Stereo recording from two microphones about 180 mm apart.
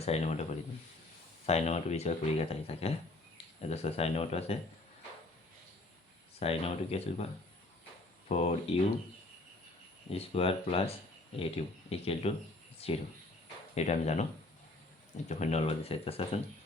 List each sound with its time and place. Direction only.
0.0 s speech: 35° left (ahead or behind)
1.5 s speech: 35° left (ahead or behind)
6.4 s speech: 35° left (ahead or behind)
8.3 s speech: 35° left (ahead or behind)
10.1 s speech: 35° left (ahead or behind)
15.3 s speech: 40° left (ahead or behind)